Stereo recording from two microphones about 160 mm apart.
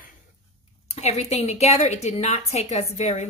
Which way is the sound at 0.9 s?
45° left (ahead or behind).